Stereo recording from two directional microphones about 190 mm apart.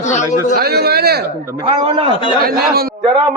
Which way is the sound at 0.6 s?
55° right (ahead or behind).